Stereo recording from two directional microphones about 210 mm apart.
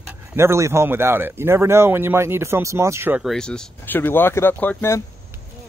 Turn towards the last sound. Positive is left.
turn(degrees=10)  # may be behind; listen again after turning